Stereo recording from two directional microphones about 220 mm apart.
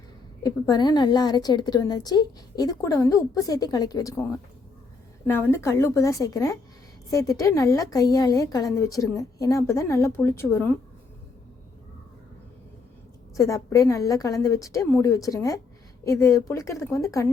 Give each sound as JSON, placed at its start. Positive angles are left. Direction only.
{"t": 0.4, "sound": "a woman's voice", "side_deg": 15}
{"t": 13.3, "sound": "a woman's voice", "side_deg": 15}